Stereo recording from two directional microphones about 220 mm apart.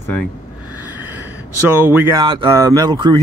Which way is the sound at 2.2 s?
20° right (ahead or behind).